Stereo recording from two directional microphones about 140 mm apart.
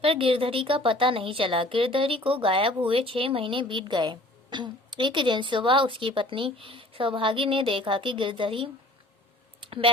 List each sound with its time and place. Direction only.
0.0 s speech: 40° right (ahead or behind)